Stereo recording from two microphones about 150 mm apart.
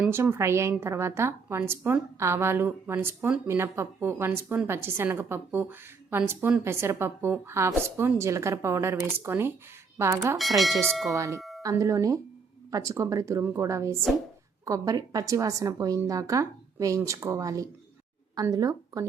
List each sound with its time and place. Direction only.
0.0 s a woman's voice: 15° right (ahead or behind)
10.3 s speech: centre (ahead or behind)
11.1 s a woman's voice: 20° right (ahead or behind)
11.3 s doorbell: centre (ahead or behind)
11.6 s a woman's voice: 20° right (ahead or behind)